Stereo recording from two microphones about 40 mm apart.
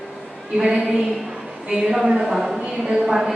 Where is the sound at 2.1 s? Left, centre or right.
Centre.